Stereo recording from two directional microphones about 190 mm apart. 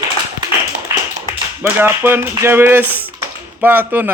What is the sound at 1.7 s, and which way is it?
Speech, 10° right (ahead or behind).